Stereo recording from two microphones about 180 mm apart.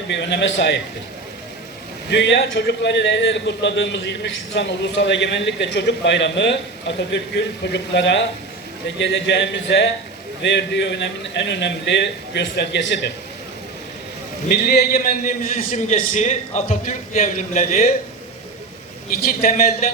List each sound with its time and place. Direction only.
0.1 s a man's voice: 75° left (ahead or behind)
2.0 s a man's voice: 70° left (ahead or behind)
14.4 s a man's voice: 60° left (ahead or behind); by 17.8 s 40° left (ahead or behind)